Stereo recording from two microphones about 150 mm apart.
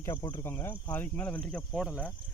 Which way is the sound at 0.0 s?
20° left (ahead or behind).